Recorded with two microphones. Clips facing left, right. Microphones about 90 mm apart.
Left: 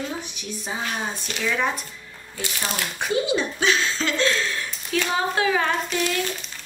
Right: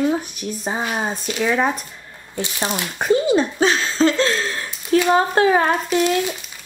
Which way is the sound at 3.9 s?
35° right (ahead or behind).